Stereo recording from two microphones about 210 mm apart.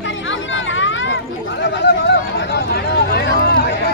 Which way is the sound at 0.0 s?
65° left (ahead or behind).